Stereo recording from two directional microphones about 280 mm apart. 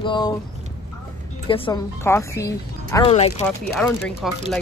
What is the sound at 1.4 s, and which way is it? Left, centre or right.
A woman's voice, centre.